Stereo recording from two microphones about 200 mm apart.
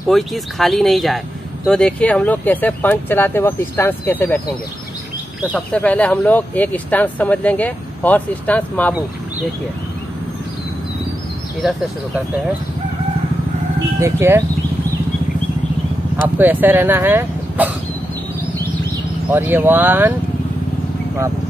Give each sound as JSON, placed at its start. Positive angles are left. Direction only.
{"t": 0.1, "sound": "speech", "side_deg": 0}
{"t": 5.5, "sound": "speech", "side_deg": 5}
{"t": 11.6, "sound": "speech", "side_deg": 0}
{"t": 13.9, "sound": "speech", "side_deg": -15}
{"t": 16.3, "sound": "speech", "side_deg": -10}
{"t": 19.2, "sound": "speech", "side_deg": -10}